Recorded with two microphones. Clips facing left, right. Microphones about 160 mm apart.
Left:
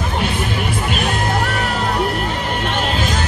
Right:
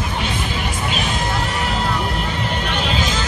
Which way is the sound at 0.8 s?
55° left (ahead or behind).